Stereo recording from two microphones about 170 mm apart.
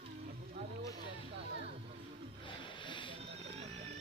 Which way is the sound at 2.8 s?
30° left (ahead or behind).